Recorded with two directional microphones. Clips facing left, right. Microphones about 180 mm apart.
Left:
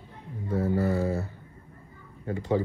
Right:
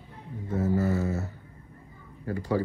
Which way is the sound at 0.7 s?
35° left (ahead or behind).